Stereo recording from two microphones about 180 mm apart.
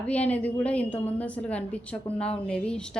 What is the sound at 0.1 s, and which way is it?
A woman's voice, 10° left (ahead or behind).